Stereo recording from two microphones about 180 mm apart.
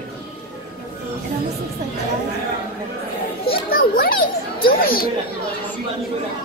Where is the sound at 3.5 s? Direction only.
55° left (ahead or behind).